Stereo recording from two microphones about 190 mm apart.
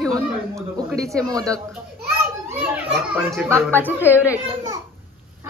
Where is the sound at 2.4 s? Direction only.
5° right (ahead or behind).